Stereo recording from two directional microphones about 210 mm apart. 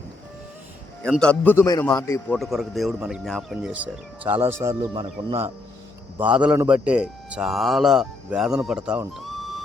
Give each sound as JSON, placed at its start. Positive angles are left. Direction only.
{"t": 1.0, "sound": "a man's voice", "side_deg": 5}
{"t": 2.4, "sound": "a man's voice", "side_deg": 0}
{"t": 6.1, "sound": "a man's voice", "side_deg": -5}